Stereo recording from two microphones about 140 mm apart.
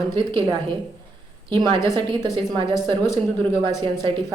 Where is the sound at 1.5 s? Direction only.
35° right (ahead or behind).